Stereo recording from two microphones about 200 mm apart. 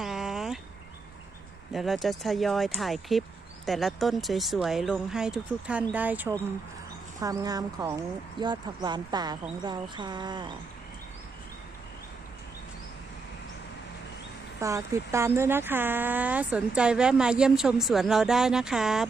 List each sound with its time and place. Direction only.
0.0 s a sound: centre (ahead or behind)
1.7 s speech: centre (ahead or behind); by 10.5 s 20° right (ahead or behind)
14.6 s speech: 15° right (ahead or behind)